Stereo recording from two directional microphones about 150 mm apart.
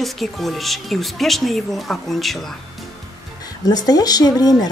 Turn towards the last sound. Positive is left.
turn(degrees=25)  # may be behind; listen again after turning